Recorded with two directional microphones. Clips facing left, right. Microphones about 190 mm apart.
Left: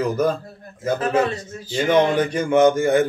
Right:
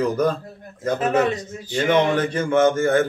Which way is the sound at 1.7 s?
15° left (ahead or behind).